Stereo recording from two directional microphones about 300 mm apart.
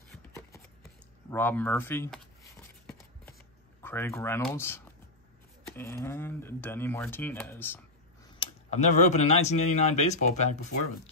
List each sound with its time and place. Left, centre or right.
1.3 s speech: centre
3.8 s speech: centre
8.4 s speech: left